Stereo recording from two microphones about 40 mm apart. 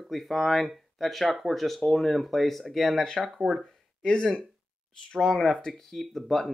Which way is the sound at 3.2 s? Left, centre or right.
Centre.